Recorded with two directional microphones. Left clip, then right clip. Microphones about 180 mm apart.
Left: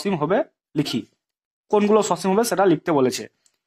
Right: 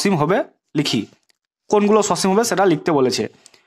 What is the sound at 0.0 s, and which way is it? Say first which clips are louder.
Speech: right 3 dB; 40° right (ahead or behind).